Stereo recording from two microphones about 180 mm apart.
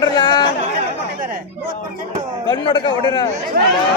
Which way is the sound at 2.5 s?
25° left (ahead or behind).